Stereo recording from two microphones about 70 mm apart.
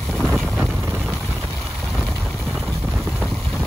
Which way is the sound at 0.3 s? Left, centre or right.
Centre.